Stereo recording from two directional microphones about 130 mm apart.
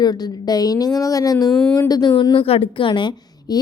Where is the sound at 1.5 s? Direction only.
5° left (ahead or behind).